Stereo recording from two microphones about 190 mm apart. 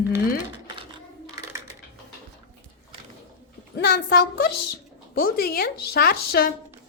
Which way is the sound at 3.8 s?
50° left (ahead or behind).